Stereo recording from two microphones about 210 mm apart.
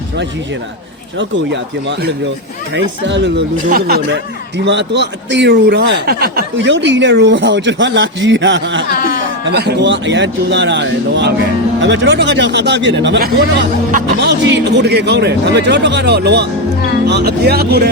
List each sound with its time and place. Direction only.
1.2 s speech: 60° right (ahead or behind)
8.9 s a sound: 45° left (ahead or behind)
9.5 s speech: 50° right (ahead or behind)